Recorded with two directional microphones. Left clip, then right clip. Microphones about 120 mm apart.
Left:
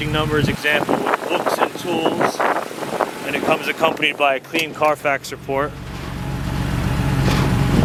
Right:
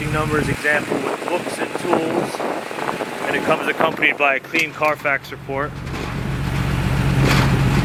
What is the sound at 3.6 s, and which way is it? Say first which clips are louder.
Speech: right 1 dB; 25° left (ahead or behind).